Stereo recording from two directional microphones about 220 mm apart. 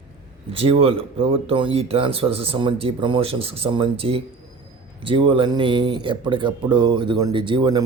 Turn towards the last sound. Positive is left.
turn(degrees=-20)  # may be behind; listen again after turning